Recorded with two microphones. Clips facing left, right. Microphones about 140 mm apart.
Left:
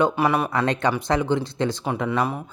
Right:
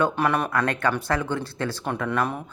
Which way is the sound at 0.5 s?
20° left (ahead or behind).